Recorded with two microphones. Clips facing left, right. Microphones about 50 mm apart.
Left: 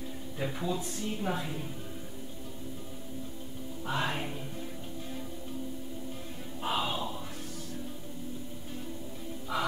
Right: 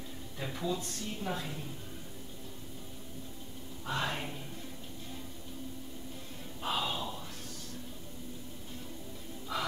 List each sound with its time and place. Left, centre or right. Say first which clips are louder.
0.4 s speech: left 2 dB; centre
3.8 s speech: left 2 dB; centre
6.6 s a sound: left 2 dB; centre
9.5 s music: left 3 dB; centre